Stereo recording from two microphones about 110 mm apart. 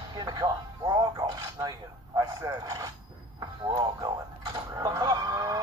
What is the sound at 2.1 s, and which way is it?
Speech, 35° right (ahead or behind).